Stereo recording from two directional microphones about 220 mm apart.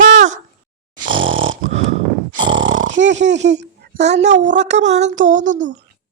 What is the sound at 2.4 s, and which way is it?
Snoring, 55° right (ahead or behind).